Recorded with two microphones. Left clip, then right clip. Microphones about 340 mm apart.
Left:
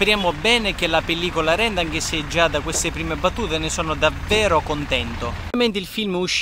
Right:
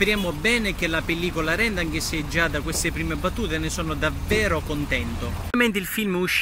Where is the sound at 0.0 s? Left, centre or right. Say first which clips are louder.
Left 4 dB; centre.